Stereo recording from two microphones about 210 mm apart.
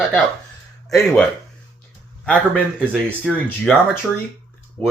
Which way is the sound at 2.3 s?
5° left (ahead or behind).